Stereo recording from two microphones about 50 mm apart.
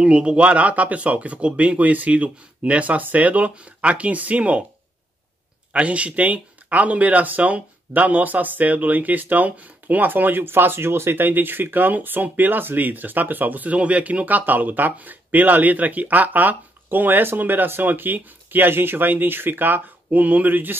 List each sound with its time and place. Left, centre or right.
0.0 s speech: centre
5.7 s speech: right